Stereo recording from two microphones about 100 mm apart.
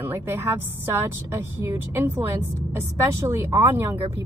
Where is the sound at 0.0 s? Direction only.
25° right (ahead or behind).